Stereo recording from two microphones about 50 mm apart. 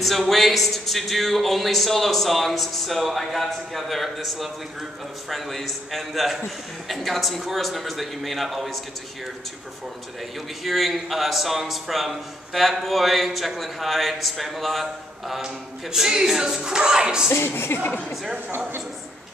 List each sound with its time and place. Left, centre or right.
0.0 s a man's voice: centre
10.6 s a man's voice: centre
15.4 s a capella: centre
17.7 s speech: left